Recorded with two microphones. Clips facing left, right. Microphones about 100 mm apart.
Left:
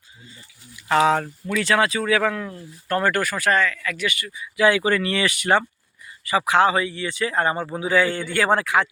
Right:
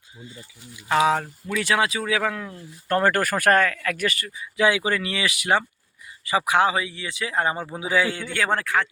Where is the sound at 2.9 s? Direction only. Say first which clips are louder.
Right 1 dB; 35° right (ahead or behind); by 4.0 s 55° right (ahead or behind).